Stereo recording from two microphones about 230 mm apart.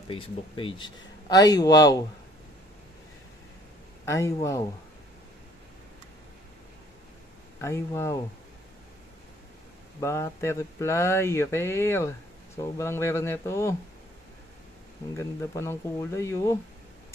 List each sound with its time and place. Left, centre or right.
0.1 s speech: left
4.0 s speech: centre
7.6 s speech: centre
9.9 s speech: centre
15.1 s speech: centre